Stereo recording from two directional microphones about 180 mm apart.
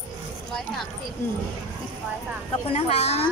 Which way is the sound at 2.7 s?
35° left (ahead or behind).